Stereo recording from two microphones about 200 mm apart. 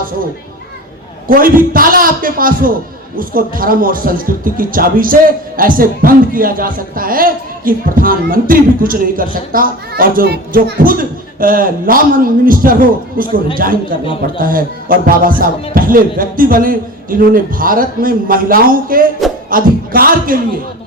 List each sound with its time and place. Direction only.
1.3 s a man's voice: 45° right (ahead or behind)